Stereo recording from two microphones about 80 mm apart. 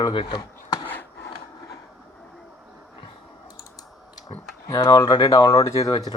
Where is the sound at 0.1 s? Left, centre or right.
Left.